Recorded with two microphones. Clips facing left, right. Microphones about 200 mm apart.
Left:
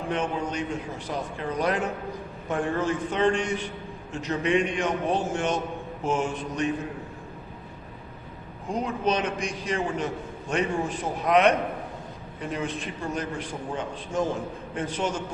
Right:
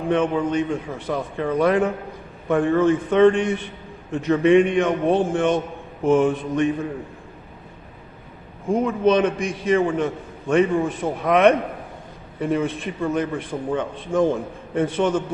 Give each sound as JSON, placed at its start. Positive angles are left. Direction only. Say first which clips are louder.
{"t": 0.1, "sound": "a man's voice", "louder": "right 9 dB", "side_deg": -55}
{"t": 8.7, "sound": "a man's voice", "louder": "right 8 dB", "side_deg": -55}